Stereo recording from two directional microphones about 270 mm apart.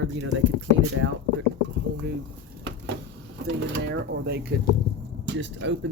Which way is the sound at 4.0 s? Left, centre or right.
Right.